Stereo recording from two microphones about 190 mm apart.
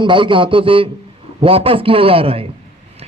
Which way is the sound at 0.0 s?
25° right (ahead or behind).